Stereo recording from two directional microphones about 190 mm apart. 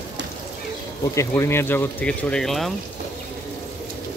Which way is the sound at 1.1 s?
15° left (ahead or behind).